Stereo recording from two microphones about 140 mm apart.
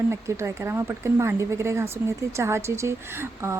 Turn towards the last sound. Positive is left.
turn(degrees=-20)  # may be behind; listen again after turning